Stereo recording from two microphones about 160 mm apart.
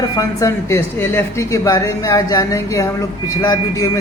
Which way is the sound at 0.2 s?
20° left (ahead or behind).